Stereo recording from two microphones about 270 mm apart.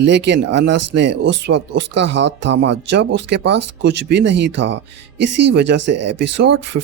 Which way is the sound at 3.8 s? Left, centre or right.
Right.